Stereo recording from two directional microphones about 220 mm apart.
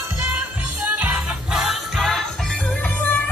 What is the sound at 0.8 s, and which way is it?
Music, 5° right (ahead or behind).